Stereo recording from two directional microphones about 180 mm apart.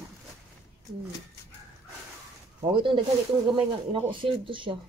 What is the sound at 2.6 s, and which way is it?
Speech, 25° right (ahead or behind).